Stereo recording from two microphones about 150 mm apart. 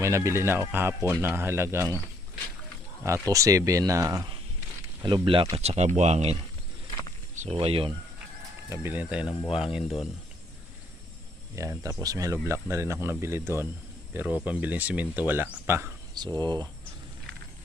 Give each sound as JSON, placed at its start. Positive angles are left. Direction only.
{"t": 0.0, "sound": "a man's voice", "side_deg": -20}
{"t": 3.0, "sound": "speech", "side_deg": -20}
{"t": 5.0, "sound": "speech", "side_deg": -35}
{"t": 7.5, "sound": "speech", "side_deg": -40}
{"t": 8.7, "sound": "a man's voice", "side_deg": -15}
{"t": 11.5, "sound": "a man's voice", "side_deg": -20}
{"t": 16.1, "sound": "speech", "side_deg": -30}